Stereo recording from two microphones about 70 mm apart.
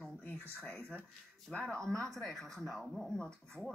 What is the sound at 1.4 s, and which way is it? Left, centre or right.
Speech, centre.